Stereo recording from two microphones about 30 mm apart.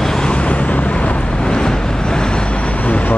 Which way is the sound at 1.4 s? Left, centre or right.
Left.